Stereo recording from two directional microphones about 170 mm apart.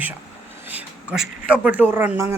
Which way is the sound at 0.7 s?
5° right (ahead or behind).